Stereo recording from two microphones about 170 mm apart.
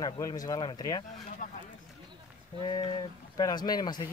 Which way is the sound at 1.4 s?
50° left (ahead or behind).